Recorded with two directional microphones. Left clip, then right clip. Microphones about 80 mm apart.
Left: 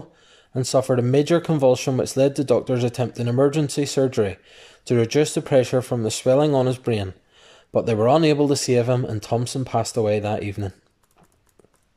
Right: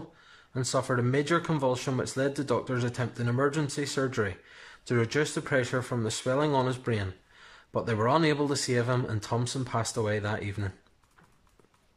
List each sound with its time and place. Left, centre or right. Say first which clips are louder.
0.3 s speech: left 9 dB; left